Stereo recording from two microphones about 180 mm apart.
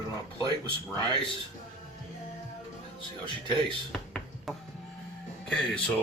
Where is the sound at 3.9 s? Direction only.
Centre (ahead or behind).